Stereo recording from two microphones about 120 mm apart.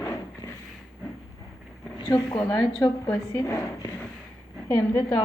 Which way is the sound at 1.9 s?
40° left (ahead or behind).